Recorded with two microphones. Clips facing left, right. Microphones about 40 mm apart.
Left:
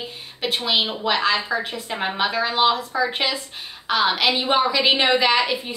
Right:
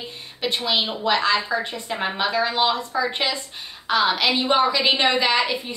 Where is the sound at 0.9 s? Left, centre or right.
Centre.